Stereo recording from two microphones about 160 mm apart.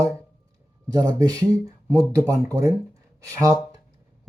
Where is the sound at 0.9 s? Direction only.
25° right (ahead or behind).